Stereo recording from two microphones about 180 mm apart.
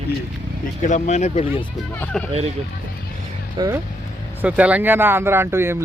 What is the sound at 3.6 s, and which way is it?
Speech, 25° right (ahead or behind).